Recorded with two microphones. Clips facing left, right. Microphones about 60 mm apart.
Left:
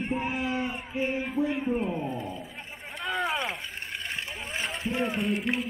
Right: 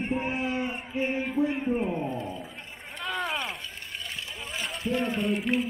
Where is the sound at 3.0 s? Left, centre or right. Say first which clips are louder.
Left 2 dB; centre.